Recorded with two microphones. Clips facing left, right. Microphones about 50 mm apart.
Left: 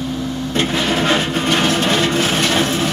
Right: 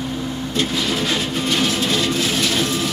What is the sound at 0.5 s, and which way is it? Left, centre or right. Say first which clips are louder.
Vehicle: left 4 dB; left.